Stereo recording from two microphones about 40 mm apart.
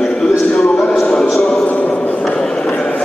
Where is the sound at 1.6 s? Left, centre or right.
Left.